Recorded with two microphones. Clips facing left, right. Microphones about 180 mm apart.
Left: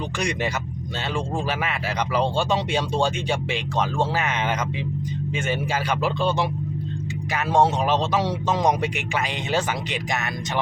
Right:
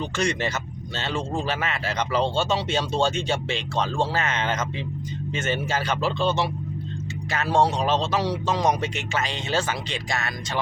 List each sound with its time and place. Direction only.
0.2 s speech: 15° left (ahead or behind)